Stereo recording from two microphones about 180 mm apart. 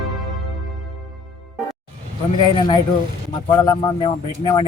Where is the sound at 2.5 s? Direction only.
25° left (ahead or behind).